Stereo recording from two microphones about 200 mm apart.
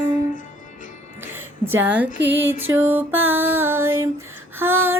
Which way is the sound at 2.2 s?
65° right (ahead or behind).